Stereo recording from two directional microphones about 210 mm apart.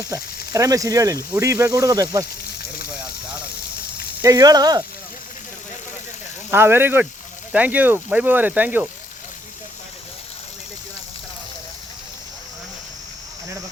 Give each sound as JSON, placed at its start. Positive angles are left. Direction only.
{"t": 0.0, "sound": "speech", "side_deg": -15}
{"t": 4.2, "sound": "speech", "side_deg": -15}
{"t": 6.5, "sound": "speech", "side_deg": -10}